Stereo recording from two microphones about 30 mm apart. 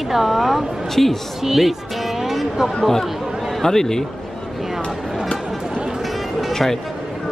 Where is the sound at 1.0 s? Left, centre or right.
Centre.